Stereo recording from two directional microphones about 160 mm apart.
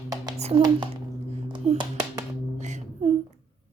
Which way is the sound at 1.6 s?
40° right (ahead or behind).